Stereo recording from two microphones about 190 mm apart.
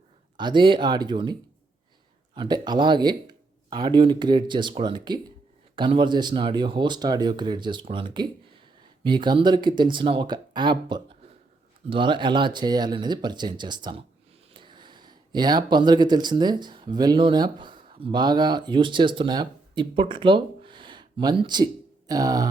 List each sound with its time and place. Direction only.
0.3 s speech: 25° right (ahead or behind)